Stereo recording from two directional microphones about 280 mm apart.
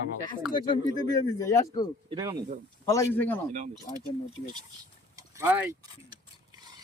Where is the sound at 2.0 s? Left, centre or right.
Centre.